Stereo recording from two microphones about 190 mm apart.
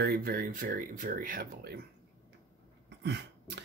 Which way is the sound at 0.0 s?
55° right (ahead or behind).